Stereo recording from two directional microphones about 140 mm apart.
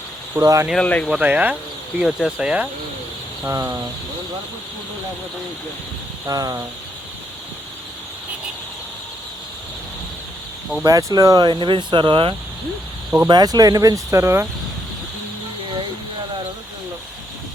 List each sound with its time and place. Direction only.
0.3 s speech: 20° right (ahead or behind)
0.7 s speech: 10° left (ahead or behind)
1.0 s speech: 5° right (ahead or behind)
3.5 s speech: 20° right (ahead or behind)
6.2 s speech: 25° right (ahead or behind)
10.8 s speech: 25° right (ahead or behind)